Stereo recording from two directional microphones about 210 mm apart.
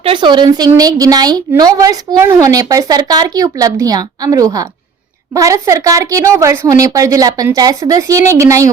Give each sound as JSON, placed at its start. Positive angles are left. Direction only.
{"t": 0.0, "sound": "a woman's voice", "side_deg": -25}